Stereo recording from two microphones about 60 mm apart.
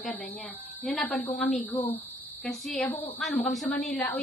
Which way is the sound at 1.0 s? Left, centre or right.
Left.